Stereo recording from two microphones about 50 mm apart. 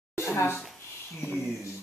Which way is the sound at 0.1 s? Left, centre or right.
Left.